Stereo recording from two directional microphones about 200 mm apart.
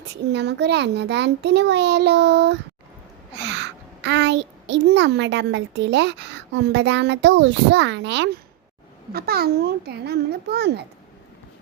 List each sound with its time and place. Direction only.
0.0 s a child's voice: 60° right (ahead or behind)
9.1 s a child's voice: 50° right (ahead or behind)